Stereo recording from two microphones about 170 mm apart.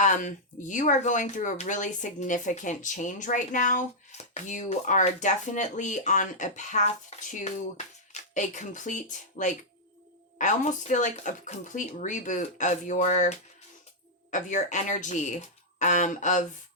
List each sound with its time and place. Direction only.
0.0 s speech: 45° left (ahead or behind)